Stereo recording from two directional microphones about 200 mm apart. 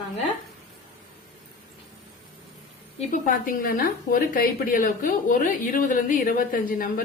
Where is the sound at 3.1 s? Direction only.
45° left (ahead or behind).